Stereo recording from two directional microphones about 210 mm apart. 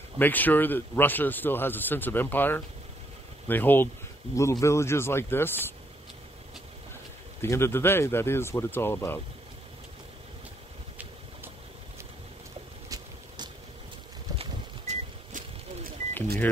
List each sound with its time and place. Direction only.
0.2 s speech: 10° left (ahead or behind)
7.4 s speech: 10° left (ahead or behind)
14.4 s a sound: 30° right (ahead or behind)